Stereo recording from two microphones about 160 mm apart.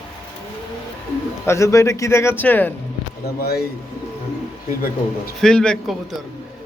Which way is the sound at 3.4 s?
85° left.